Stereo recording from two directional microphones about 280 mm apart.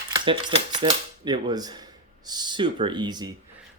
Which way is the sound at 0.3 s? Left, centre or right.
Centre.